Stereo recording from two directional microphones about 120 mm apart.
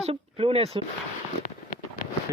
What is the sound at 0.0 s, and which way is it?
Speech, 55° right (ahead or behind).